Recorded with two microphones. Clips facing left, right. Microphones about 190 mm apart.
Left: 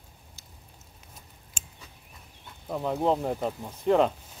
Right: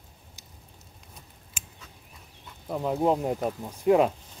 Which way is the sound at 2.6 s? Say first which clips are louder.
Right 1 dB; 5° right (ahead or behind).